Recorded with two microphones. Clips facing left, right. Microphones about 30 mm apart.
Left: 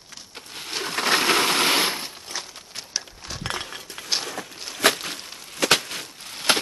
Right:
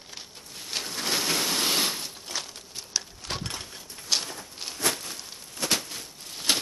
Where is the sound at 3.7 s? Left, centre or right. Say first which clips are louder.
Left 1 dB; left.